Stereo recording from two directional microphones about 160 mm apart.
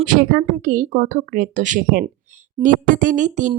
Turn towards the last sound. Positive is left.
turn(degrees=-50)  # may be behind; listen again after turning